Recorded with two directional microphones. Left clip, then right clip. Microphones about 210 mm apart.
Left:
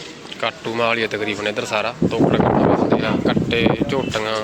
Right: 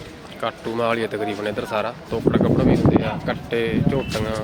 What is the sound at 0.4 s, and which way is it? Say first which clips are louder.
Speech: left 3 dB; 10° right (ahead or behind).